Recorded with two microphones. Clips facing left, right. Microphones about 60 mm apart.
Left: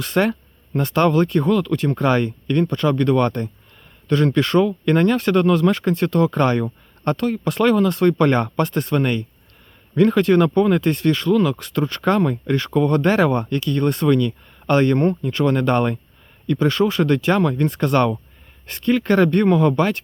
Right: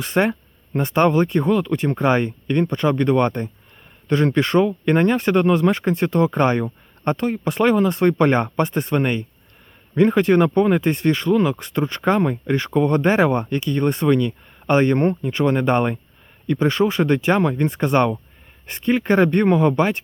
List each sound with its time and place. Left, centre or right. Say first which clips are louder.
0.0 s speech: even; centre
15.1 s speech: even; centre